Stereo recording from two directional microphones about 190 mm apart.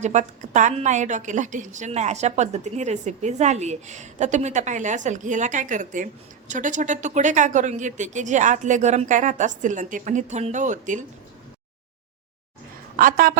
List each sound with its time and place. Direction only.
0.0 s a woman's voice: 40° right (ahead or behind)
13.0 s a woman's voice: 50° right (ahead or behind)